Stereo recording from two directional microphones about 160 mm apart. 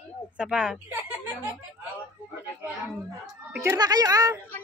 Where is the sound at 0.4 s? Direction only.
5° right (ahead or behind).